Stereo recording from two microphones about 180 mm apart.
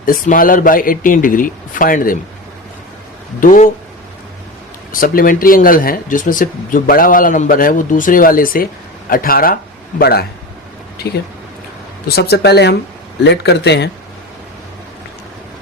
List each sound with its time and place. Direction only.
0.0 s speech: 50° left (ahead or behind)
3.4 s speech: 45° left (ahead or behind)
4.9 s speech: 50° left (ahead or behind)
12.0 s a man's voice: 60° left (ahead or behind)